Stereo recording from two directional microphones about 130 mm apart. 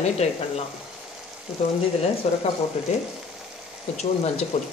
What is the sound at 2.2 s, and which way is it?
Speech, 55° left (ahead or behind).